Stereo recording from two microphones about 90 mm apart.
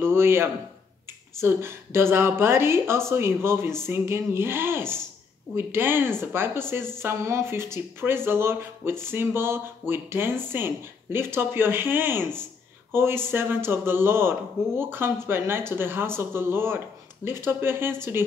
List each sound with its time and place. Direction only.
0.0 s a man's voice: 25° right (ahead or behind)